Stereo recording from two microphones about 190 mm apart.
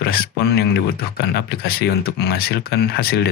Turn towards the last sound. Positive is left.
turn(degrees=55)  # may be behind; listen again after turning